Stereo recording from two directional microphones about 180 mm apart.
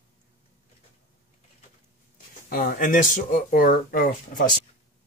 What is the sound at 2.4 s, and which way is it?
Speech, 45° left (ahead or behind).